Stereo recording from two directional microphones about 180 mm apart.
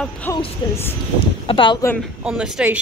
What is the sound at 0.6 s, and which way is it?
Speech, 25° left (ahead or behind).